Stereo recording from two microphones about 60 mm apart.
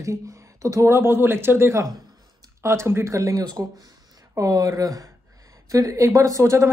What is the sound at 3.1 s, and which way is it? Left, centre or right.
Speech, right.